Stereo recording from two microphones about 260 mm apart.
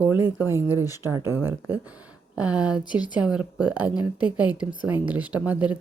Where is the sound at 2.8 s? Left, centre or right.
Centre.